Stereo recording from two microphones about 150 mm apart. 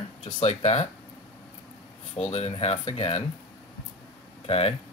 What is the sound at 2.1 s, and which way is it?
Speech, 40° left (ahead or behind).